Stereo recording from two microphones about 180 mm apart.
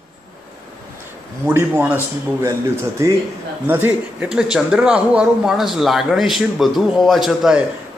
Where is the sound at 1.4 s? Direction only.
10° right (ahead or behind).